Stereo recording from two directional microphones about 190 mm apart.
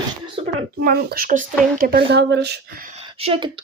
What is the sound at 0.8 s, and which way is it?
Speech, 55° right (ahead or behind).